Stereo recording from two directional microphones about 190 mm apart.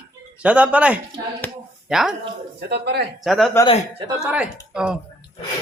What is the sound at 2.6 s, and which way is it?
Speech, 60° right (ahead or behind).